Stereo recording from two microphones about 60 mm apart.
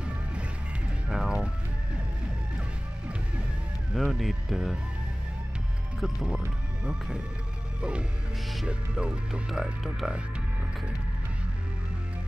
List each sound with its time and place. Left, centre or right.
0.0 s music: centre
3.9 s speech: centre
6.1 s music: centre
6.8 s speech: centre
8.6 s music: centre
9.5 s speech: centre